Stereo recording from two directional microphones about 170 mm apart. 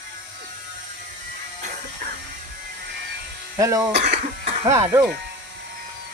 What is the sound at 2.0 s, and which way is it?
Music, 50° right (ahead or behind).